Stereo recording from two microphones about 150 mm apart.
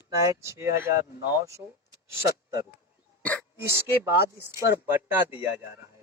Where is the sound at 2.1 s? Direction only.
20° right (ahead or behind).